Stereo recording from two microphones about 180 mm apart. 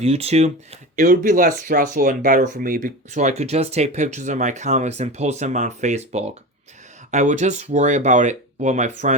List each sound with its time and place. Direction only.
0.0 s speech: 35° right (ahead or behind)
0.9 s speech: 45° right (ahead or behind)